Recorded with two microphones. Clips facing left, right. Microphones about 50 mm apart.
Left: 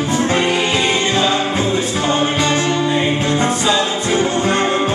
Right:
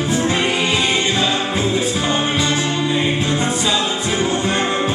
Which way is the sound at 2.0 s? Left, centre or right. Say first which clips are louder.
Left 2 dB; centre.